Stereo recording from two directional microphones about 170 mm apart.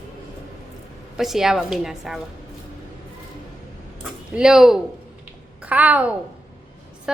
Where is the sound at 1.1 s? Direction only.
Centre (ahead or behind).